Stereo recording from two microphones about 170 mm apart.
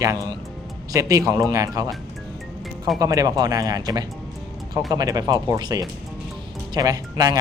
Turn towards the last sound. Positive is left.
turn(degrees=-20)  # may be behind; listen again after turning